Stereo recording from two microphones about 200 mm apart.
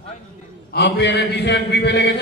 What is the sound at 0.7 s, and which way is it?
A man's voice, 60° left (ahead or behind).